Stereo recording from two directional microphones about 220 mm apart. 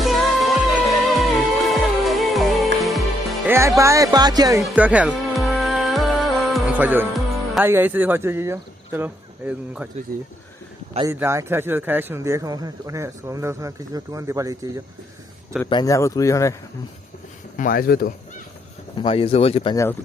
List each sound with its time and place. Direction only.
0.0 s music: centre (ahead or behind)
3.4 s speech: 10° right (ahead or behind)
4.6 s music: 5° right (ahead or behind)
11.1 s a man's voice: 10° right (ahead or behind)
15.7 s speech: 15° left (ahead or behind)
17.6 s speech: 40° left (ahead or behind)
18.9 s speech: 25° left (ahead or behind)
19.7 s speech: 15° left (ahead or behind)